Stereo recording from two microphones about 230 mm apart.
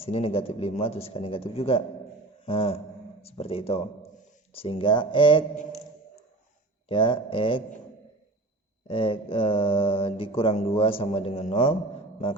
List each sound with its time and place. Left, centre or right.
0.0 s mantra: left
2.5 s speech: left
4.5 s mantra: left
6.8 s mantra: left
8.9 s mantra: left